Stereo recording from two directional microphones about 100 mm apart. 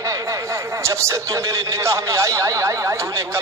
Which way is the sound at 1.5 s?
30° right (ahead or behind).